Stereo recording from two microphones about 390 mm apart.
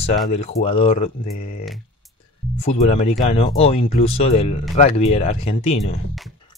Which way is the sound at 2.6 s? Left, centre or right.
Centre.